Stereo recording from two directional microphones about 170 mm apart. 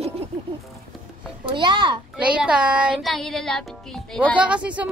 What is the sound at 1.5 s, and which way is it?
Speech, 25° right (ahead or behind).